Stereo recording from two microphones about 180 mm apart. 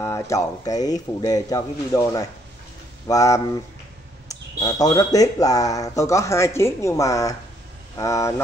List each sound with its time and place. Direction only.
0.0 s speech: 15° left (ahead or behind)